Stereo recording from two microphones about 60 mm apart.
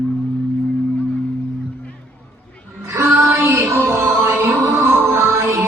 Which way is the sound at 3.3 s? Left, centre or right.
Right.